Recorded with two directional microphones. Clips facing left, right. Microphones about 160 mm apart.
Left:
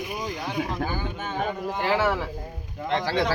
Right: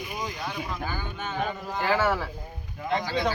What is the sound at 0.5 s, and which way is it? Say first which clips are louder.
Speech: left 5 dB; 45° left (ahead or behind).